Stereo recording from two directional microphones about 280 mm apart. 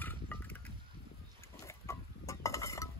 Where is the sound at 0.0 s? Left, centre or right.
Centre.